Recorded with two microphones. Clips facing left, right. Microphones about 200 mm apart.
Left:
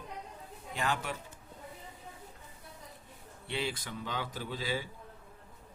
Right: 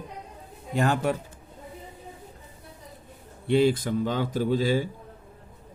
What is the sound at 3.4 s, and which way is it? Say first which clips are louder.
Speech: right 15 dB; 45° right (ahead or behind).